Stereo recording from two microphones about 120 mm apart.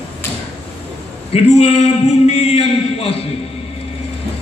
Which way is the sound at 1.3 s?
60° left (ahead or behind).